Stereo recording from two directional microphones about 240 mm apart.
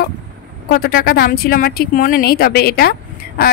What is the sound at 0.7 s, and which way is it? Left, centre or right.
Speech, left.